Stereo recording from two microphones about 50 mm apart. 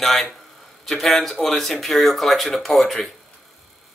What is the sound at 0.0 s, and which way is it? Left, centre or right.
A man's voice, centre.